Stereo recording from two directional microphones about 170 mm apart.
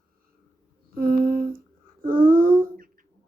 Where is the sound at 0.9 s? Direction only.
55° right (ahead or behind).